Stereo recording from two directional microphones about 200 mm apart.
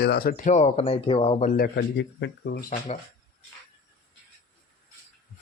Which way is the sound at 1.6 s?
60° left (ahead or behind).